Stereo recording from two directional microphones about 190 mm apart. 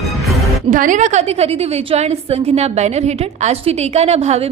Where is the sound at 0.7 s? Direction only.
40° right (ahead or behind).